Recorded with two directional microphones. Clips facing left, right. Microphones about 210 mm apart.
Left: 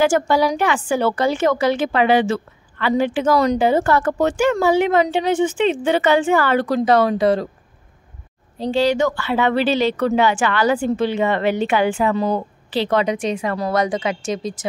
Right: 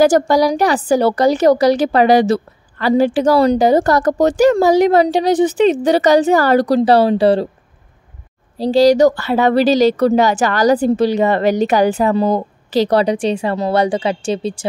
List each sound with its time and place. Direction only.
0.0 s a woman's voice: 40° right (ahead or behind)
8.5 s a woman's voice: 35° right (ahead or behind)